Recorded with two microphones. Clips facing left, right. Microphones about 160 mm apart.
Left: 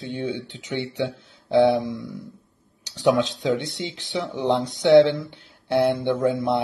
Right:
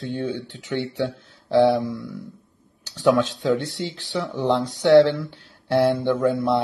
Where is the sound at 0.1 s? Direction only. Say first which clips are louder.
Even; 20° left (ahead or behind).